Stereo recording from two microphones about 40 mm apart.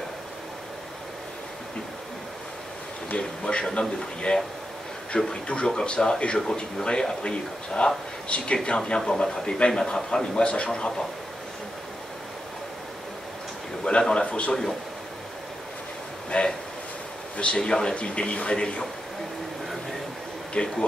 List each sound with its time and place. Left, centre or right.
3.2 s a man's voice: left
13.8 s speech: left
14.5 s a man's voice: centre
16.3 s speech: left
17.6 s a man's voice: centre
17.9 s speech: left
20.6 s speech: left